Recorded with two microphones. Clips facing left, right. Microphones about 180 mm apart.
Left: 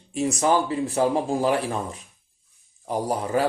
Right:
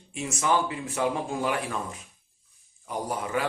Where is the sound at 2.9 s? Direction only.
35° left (ahead or behind).